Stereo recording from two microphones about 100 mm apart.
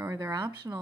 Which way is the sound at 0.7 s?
25° right (ahead or behind).